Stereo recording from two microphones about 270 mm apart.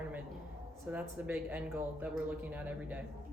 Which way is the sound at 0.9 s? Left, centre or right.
Centre.